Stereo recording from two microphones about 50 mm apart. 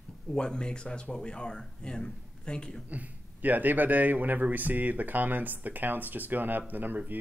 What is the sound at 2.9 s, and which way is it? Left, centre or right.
A man's voice, right.